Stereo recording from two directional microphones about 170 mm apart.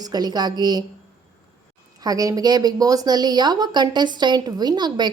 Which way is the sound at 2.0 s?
20° right (ahead or behind).